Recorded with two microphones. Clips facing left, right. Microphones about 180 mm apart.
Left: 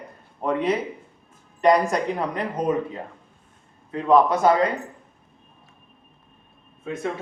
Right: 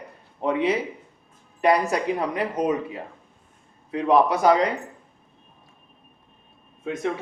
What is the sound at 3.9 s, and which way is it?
Speech, 10° right (ahead or behind).